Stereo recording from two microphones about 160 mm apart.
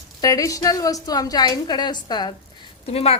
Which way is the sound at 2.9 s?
40° left (ahead or behind).